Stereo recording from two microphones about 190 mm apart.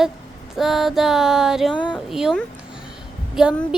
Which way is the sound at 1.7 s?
25° left (ahead or behind).